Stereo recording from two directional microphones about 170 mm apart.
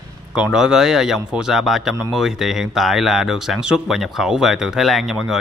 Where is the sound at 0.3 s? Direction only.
5° right (ahead or behind).